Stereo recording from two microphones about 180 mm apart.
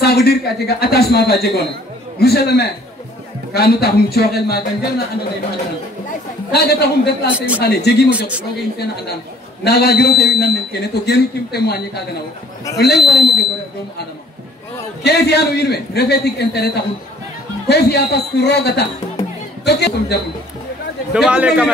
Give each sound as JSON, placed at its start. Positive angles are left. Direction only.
{"t": 0.0, "sound": "a man's voice", "side_deg": 60}
{"t": 6.5, "sound": "a man's voice", "side_deg": 65}
{"t": 7.3, "sound": "a man's voice", "side_deg": -10}
{"t": 7.6, "sound": "a man's voice", "side_deg": 65}
{"t": 8.1, "sound": "a man's voice", "side_deg": -5}
{"t": 8.7, "sound": "a man's voice", "side_deg": 65}
{"t": 15.0, "sound": "a man's voice", "side_deg": 65}
{"t": 17.6, "sound": "a man's voice", "side_deg": 65}
{"t": 21.1, "sound": "a man's voice", "side_deg": -5}